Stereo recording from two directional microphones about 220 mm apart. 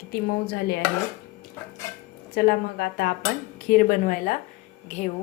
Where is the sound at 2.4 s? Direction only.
45° left (ahead or behind).